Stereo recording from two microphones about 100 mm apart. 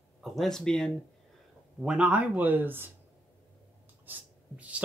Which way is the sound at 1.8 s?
10° right (ahead or behind).